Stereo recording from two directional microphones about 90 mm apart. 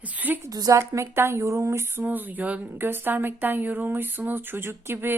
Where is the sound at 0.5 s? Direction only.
45° right (ahead or behind).